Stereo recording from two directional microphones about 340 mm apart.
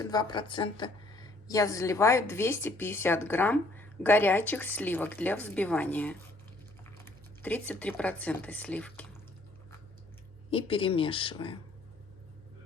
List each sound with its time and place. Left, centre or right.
0.0 s a woman's voice: centre
10.5 s a woman's voice: centre